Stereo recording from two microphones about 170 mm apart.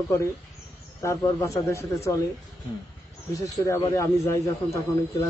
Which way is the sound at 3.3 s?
20° left (ahead or behind).